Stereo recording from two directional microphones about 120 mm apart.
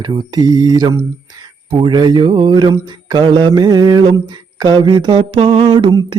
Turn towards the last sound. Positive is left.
turn(degrees=-45)  # may be behind; listen again after turning